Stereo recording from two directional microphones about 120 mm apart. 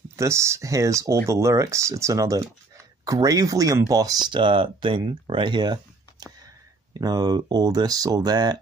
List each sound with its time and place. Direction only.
0.1 s speech: 25° right (ahead or behind)